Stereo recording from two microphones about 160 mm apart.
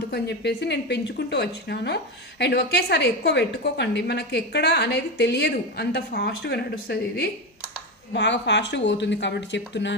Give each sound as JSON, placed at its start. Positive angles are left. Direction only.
{"t": 0.1, "sound": "a woman's voice", "side_deg": 90}